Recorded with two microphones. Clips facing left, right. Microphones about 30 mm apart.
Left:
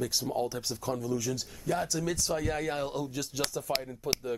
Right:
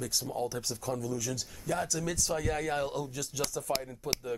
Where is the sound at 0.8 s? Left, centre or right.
Left.